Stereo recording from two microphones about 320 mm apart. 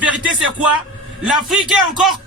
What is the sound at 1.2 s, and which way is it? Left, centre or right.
Speech, centre.